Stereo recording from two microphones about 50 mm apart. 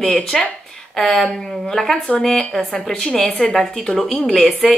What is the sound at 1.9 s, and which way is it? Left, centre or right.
Speech, left.